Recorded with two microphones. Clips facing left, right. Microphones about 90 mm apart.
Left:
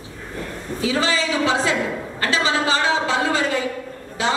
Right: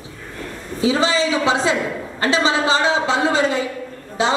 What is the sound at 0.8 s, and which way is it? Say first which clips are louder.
A woman's voice: right 4 dB; 25° right (ahead or behind).